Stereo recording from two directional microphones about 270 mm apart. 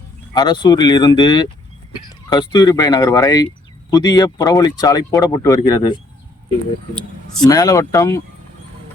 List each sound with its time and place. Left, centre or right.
0.3 s speech: centre
7.4 s speech: centre